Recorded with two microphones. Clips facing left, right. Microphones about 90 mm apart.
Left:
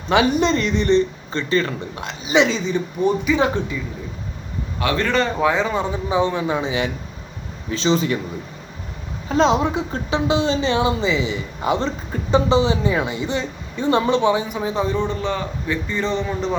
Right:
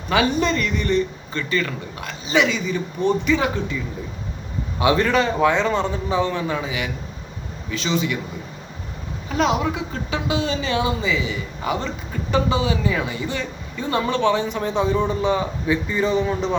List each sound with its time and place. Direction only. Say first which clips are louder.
0.1 s a woman's voice: left 3 dB; 20° left (ahead or behind)
2.0 s a woman's voice: left 2 dB; 20° left (ahead or behind)
4.8 s a man's voice: right 3 dB; 20° right (ahead or behind)
5.0 s speech: right 1 dB; 5° right (ahead or behind)
6.1 s a woman's voice: left 5 dB; 20° left (ahead or behind); by 8.2 s 35° left (ahead or behind)
9.3 s a woman's voice: left 4 dB; 25° left (ahead or behind); by 15.0 s centre (ahead or behind)
15.0 s a man's voice: right 3 dB; 15° right (ahead or behind)